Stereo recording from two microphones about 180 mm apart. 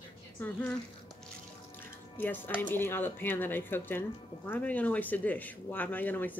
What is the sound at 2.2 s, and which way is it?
Speech, 10° left (ahead or behind).